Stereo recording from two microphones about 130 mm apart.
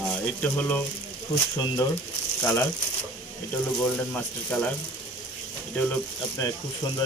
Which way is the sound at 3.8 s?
15° left (ahead or behind).